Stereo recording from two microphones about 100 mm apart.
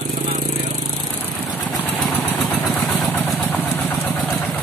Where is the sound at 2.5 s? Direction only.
20° left (ahead or behind).